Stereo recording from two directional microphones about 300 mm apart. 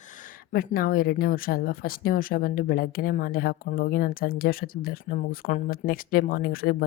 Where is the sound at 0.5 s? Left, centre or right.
Left.